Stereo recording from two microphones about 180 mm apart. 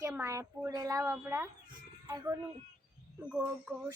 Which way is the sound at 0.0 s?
15° right (ahead or behind).